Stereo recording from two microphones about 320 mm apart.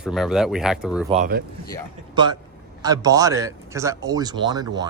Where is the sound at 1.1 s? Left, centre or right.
Right.